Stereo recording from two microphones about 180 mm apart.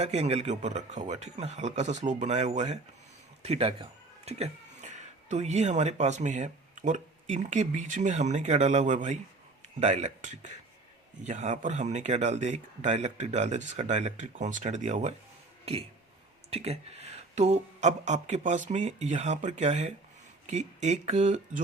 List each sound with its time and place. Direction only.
0.0 s speech: 35° right (ahead or behind)
16.5 s speech: 35° right (ahead or behind)